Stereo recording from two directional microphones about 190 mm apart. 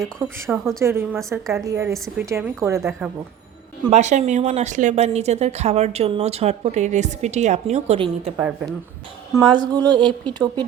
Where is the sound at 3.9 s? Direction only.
40° right (ahead or behind).